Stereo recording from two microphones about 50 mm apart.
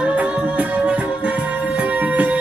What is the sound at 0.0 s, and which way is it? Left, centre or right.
Music, right.